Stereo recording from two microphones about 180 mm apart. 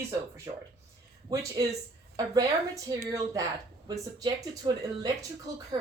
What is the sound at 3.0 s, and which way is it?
Speech, 20° right (ahead or behind).